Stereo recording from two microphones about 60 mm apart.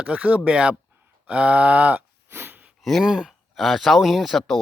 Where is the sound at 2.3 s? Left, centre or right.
Right.